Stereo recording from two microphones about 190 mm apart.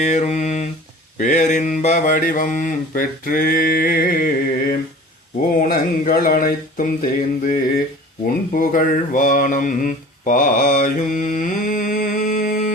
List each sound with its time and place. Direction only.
0.0 s mantra: 40° left (ahead or behind)